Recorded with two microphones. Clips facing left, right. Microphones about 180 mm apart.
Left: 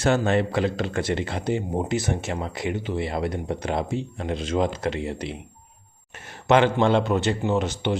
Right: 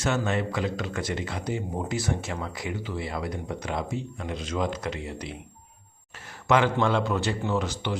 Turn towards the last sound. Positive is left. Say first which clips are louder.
# left 4 dB
turn(degrees=25)  # may be behind; listen again after turning